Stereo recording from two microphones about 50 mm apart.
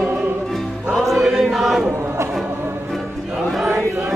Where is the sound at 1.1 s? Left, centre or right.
Centre.